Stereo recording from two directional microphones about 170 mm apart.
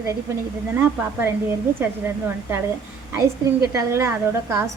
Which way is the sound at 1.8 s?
10° right (ahead or behind).